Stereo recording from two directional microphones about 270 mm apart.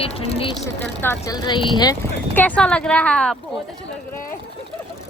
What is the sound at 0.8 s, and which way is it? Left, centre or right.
Speech, centre.